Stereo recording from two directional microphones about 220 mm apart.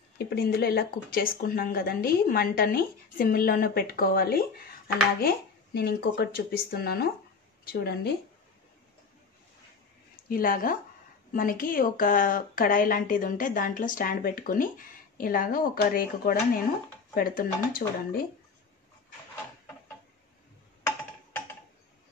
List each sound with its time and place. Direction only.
0.3 s speech: 45° left (ahead or behind)
10.2 s a woman's voice: 40° left (ahead or behind)